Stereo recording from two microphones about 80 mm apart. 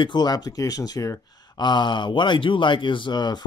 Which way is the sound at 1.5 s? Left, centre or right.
Left.